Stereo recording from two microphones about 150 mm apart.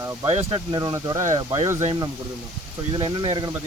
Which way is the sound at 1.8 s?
30° right (ahead or behind).